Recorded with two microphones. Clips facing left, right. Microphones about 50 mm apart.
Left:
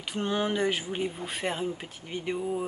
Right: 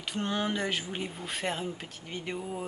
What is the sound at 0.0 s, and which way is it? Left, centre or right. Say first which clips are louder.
Speech: left 2 dB; centre.